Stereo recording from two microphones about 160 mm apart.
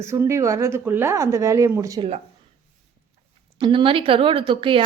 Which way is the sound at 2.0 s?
40° right (ahead or behind).